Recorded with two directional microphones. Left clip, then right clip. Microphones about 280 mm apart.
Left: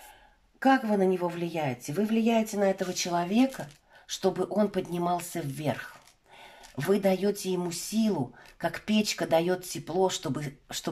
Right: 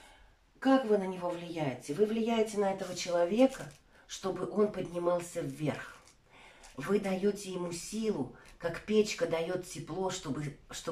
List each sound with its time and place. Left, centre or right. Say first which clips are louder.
0.6 s a woman's voice: left 4 dB; left
6.8 s a woman's voice: left 6 dB; left